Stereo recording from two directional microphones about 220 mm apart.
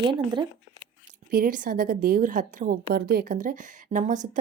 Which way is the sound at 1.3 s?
40° right (ahead or behind).